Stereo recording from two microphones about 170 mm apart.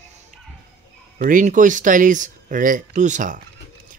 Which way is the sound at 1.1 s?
50° right (ahead or behind).